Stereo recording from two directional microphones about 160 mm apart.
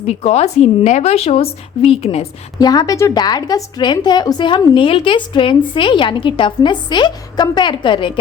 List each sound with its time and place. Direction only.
0.0 s a woman's voice: 40° left (ahead or behind)
2.6 s a woman's voice: 25° left (ahead or behind)